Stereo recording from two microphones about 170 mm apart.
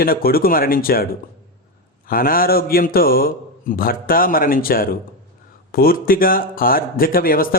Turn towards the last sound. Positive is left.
turn(degrees=60)  # may be behind; listen again after turning